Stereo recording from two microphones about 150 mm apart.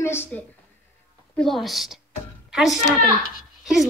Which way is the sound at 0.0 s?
15° left (ahead or behind).